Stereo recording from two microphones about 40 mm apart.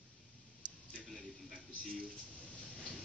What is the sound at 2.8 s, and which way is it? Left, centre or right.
Train, centre.